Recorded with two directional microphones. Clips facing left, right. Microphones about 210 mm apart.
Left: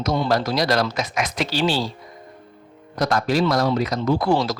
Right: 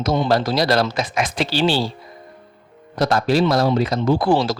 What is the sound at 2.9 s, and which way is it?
Speech, 30° right (ahead or behind).